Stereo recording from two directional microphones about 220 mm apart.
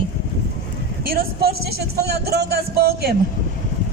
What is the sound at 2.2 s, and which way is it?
Speech, 50° right (ahead or behind).